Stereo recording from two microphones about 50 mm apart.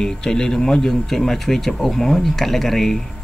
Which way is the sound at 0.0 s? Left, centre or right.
Centre.